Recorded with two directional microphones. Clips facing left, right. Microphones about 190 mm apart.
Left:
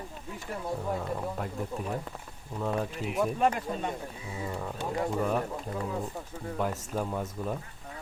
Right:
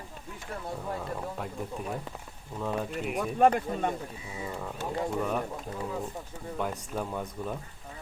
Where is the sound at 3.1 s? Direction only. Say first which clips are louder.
Right 4 dB; 50° right (ahead or behind).